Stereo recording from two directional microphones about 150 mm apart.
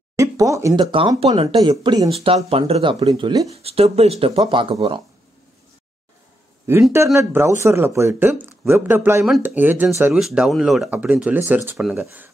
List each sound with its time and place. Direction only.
0.1 s speech: 20° right (ahead or behind)
0.7 s speech: 35° right (ahead or behind)
2.1 s speech: 40° right (ahead or behind)
3.5 s speech: 40° right (ahead or behind)
6.7 s speech: 15° right (ahead or behind)